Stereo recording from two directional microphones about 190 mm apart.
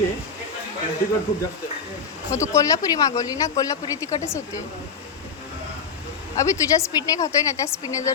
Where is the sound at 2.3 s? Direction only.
15° left (ahead or behind).